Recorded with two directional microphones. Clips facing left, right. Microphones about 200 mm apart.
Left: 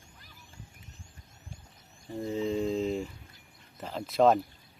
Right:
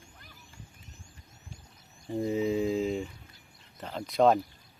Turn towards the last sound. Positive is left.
turn(degrees=0)  # may be behind; listen again after turning